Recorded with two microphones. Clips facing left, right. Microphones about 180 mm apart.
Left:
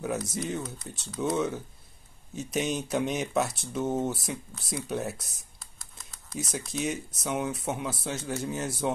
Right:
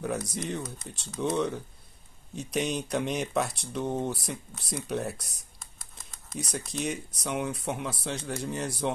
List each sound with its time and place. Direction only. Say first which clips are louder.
0.3 s speech: left 1 dB; centre (ahead or behind)
0.6 s speech: left 1 dB; 20° right (ahead or behind)
0.8 s speech: even; centre (ahead or behind)
5.9 s typing: left 1 dB; centre (ahead or behind)
6.7 s speech: left 2 dB; centre (ahead or behind)